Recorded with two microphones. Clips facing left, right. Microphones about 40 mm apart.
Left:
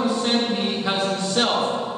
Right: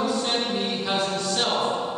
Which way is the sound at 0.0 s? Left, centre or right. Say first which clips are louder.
Left 3 dB; centre.